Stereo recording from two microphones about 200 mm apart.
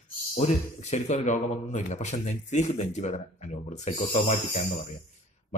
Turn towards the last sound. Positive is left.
turn(degrees=35)  # may be behind; listen again after turning